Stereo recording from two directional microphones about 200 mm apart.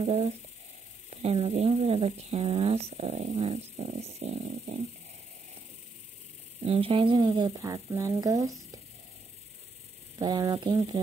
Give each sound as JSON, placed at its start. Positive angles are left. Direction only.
{"t": 0.0, "sound": "a woman's voice", "side_deg": -30}
{"t": 6.6, "sound": "speech", "side_deg": -30}
{"t": 10.1, "sound": "speech", "side_deg": -20}